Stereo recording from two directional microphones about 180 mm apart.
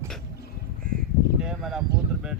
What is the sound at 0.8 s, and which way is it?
Crow, 50° right (ahead or behind).